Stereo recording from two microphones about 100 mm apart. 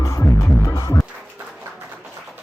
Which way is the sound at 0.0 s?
30° left (ahead or behind).